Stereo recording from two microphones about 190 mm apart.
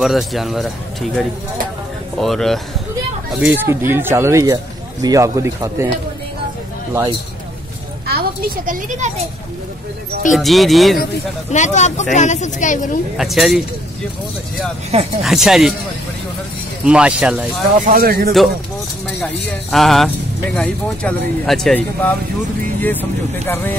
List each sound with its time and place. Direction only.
0.0 s speech: centre (ahead or behind)
2.1 s speech: centre (ahead or behind)
3.3 s speech: 10° right (ahead or behind)
6.9 s speech: 20° right (ahead or behind)
8.1 s a child's voice: 50° right (ahead or behind)
10.3 s speech: centre (ahead or behind)
11.5 s speech: 40° left (ahead or behind)
13.2 s speech: centre (ahead or behind)
14.9 s speech: 35° right (ahead or behind)
15.2 s speech: centre (ahead or behind)
16.8 s speech: 5° right (ahead or behind)
17.7 s speech: 50° right (ahead or behind)
19.7 s speech: centre (ahead or behind)